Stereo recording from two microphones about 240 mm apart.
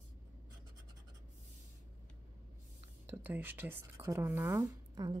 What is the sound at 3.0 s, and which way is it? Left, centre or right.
A woman's voice, centre.